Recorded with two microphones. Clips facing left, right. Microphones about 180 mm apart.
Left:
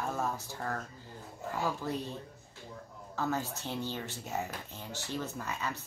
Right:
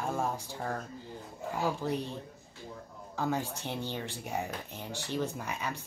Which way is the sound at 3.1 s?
15° right (ahead or behind).